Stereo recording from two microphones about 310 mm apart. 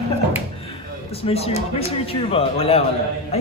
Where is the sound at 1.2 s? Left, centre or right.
Centre.